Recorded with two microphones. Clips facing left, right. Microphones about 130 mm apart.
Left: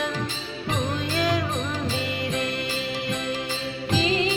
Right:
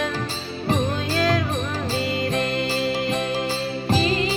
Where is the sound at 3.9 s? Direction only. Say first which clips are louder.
Right 1 dB; 40° right (ahead or behind).